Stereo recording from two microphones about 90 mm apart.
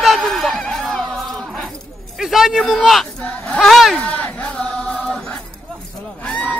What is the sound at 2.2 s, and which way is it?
Speech, 5° right (ahead or behind).